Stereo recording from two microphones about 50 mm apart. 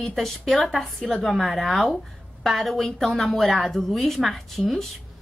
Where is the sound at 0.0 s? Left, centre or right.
Centre.